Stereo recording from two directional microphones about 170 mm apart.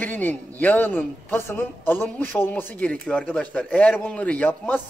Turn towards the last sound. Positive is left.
turn(degrees=10)  # may be behind; listen again after turning